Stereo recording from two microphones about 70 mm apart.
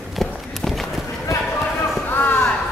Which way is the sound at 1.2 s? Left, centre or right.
Left.